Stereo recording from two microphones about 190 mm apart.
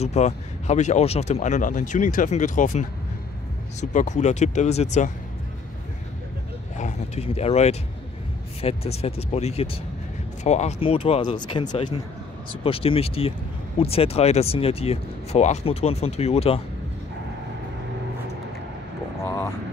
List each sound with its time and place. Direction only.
0.0 s speech: 35° left (ahead or behind)
6.8 s speech: 35° left (ahead or behind)
19.2 s vehicle: 15° left (ahead or behind)